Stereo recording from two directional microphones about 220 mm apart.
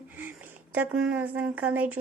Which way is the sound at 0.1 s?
10° right (ahead or behind).